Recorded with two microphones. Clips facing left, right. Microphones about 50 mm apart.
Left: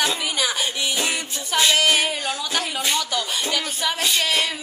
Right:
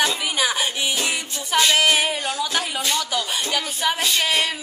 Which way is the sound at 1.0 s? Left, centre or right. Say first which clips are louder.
Even; centre.